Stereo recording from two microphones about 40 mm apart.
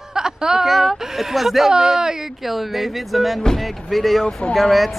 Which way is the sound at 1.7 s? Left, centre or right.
Centre.